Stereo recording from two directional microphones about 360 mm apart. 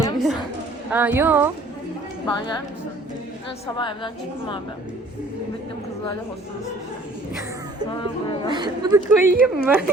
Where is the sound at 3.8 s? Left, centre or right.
Centre.